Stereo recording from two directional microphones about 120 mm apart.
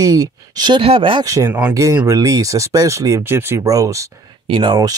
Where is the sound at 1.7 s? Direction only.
25° right (ahead or behind).